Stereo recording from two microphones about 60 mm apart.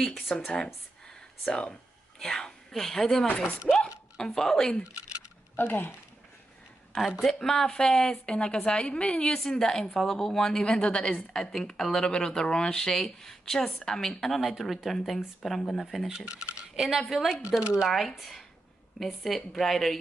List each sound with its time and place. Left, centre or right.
0.3 s a woman's voice: centre
1.0 s a sound: centre
2.1 s speech: centre
3.7 s a woman's voice: centre
4.4 s a woman's voice: centre
5.6 s speech: left
7.0 s a woman's voice: centre
16.3 s speech: centre
17.9 s speech: centre